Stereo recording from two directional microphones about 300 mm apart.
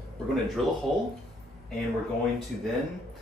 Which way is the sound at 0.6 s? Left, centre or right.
Centre.